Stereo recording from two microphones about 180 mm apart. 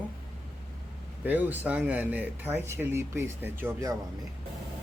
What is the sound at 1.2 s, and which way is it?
Speech, 10° right (ahead or behind).